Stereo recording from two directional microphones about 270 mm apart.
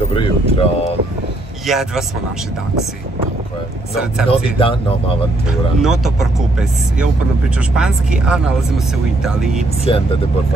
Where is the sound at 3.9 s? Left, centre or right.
Centre.